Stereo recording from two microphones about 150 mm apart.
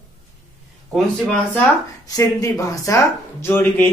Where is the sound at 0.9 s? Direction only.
Centre (ahead or behind).